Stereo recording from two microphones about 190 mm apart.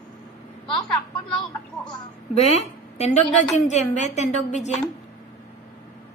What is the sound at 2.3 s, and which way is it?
A woman's voice, 35° left (ahead or behind).